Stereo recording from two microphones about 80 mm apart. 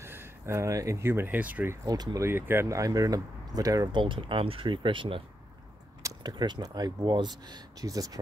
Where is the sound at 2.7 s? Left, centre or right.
Right.